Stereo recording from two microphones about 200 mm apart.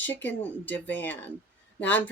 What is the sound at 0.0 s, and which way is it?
Speech, 10° left (ahead or behind).